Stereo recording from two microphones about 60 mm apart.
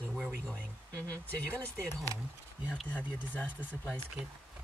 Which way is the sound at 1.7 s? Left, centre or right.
Right.